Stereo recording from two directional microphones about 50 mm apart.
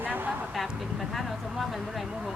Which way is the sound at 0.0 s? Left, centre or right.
Right.